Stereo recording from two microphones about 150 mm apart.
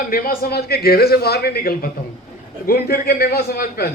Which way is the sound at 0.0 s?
75° left (ahead or behind).